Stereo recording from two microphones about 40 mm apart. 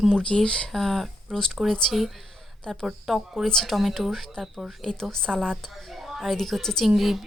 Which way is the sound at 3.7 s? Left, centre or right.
Centre.